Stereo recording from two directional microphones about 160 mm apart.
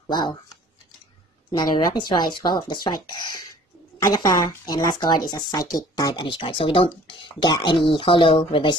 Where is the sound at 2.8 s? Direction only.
25° left (ahead or behind).